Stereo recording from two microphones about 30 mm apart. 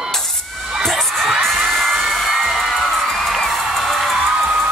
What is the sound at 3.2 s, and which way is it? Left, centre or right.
Music, centre.